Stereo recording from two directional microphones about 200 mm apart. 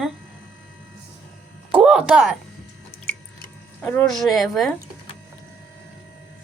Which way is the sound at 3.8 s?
10° left (ahead or behind).